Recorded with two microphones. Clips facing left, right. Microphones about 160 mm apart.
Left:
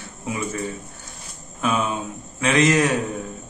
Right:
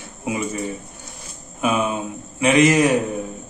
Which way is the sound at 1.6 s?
10° right (ahead or behind).